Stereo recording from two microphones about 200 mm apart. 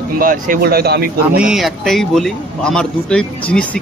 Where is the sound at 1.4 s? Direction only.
Centre (ahead or behind).